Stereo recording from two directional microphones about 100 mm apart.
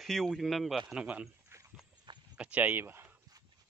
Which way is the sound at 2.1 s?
50° right (ahead or behind).